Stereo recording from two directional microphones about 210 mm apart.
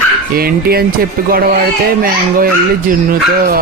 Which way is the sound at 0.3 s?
45° right (ahead or behind).